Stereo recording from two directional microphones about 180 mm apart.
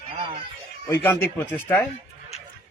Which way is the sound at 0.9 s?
15° left (ahead or behind).